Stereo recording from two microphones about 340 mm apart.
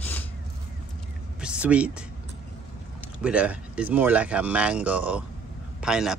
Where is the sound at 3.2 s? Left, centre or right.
Centre.